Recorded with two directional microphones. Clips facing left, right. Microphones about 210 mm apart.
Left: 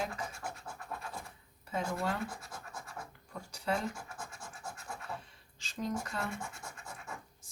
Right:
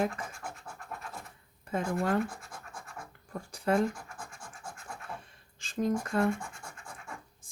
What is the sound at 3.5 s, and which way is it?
Speech, 50° right (ahead or behind).